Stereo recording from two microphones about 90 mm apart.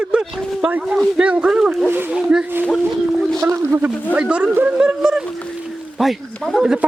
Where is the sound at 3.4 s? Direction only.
30° right (ahead or behind).